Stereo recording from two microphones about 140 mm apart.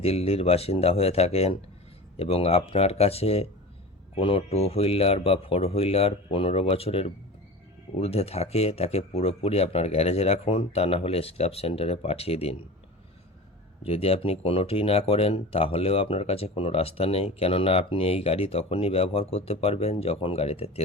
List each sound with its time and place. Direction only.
0.0 s speech: 45° left (ahead or behind)
13.8 s speech: 45° left (ahead or behind)